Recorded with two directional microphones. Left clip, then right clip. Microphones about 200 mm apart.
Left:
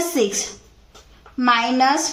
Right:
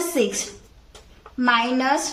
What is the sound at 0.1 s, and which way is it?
Speech, 30° left (ahead or behind).